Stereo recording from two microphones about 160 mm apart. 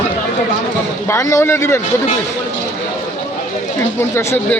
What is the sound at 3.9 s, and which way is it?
Speech, 15° left (ahead or behind).